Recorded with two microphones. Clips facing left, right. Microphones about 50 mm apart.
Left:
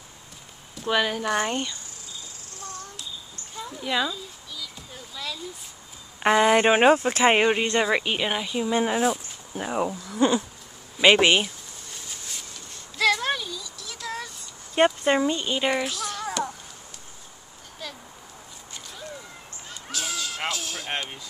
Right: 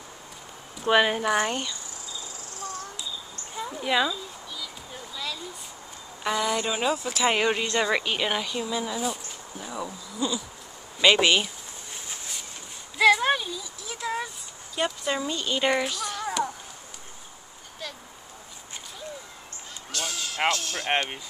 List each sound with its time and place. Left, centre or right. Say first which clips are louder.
0.7 s speech: right 3 dB; centre
3.5 s a sound: right 2 dB; centre
6.2 s speech: left 8 dB; left
7.4 s speech: left 3 dB; left
8.6 s speech: left 6 dB; left
11.0 s speech: left 2 dB; left
12.9 s child singing: right 3 dB; centre
14.8 s speech: left 7 dB; left
15.2 s speech: left 4 dB; left
15.6 s a sound: even; centre
19.9 s a sound: left 1 dB; centre
20.5 s music: right 2 dB; centre